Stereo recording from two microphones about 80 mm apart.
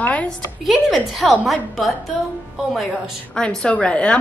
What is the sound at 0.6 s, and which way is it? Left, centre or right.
A woman's voice, centre.